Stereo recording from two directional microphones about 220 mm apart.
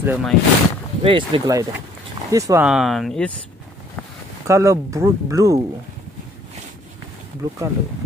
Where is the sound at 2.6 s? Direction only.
Centre (ahead or behind).